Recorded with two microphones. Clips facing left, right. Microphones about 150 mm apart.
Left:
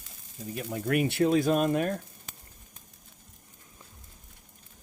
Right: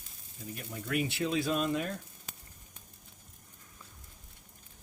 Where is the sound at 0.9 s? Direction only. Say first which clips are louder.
Left 8 dB; 55° left (ahead or behind).